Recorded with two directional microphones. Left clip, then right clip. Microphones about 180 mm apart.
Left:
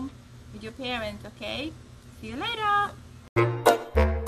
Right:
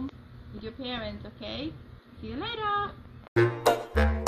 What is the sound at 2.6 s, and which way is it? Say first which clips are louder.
Speech: left 5 dB; 10° left (ahead or behind).